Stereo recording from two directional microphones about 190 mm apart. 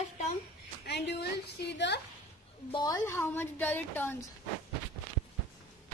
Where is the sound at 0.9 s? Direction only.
60° left (ahead or behind).